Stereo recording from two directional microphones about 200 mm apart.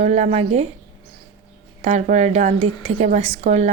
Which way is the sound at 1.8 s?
35° right (ahead or behind).